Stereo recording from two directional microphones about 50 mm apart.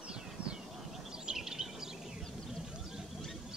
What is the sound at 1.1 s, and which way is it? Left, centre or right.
Bird, centre.